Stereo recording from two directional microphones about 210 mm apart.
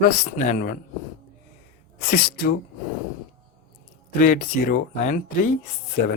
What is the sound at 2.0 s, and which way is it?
Speech, 45° left (ahead or behind).